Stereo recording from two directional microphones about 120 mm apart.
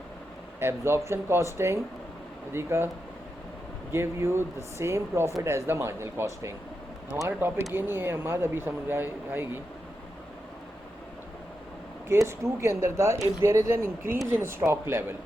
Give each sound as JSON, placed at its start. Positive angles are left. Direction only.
{"t": 0.6, "sound": "speech", "side_deg": -20}
{"t": 3.9, "sound": "speech", "side_deg": -20}
{"t": 12.0, "sound": "speech", "side_deg": -25}